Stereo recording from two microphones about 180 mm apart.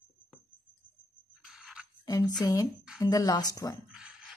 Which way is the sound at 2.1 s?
20° left (ahead or behind).